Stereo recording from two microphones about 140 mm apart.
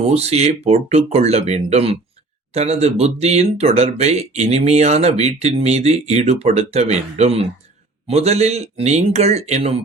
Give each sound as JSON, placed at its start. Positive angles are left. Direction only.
{"t": 0.0, "sound": "speech", "side_deg": -45}